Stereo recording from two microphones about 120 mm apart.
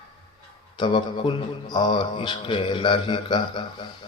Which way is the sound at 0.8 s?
45° left (ahead or behind).